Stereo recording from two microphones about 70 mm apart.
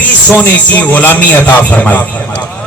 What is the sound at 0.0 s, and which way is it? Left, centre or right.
A man's voice, left.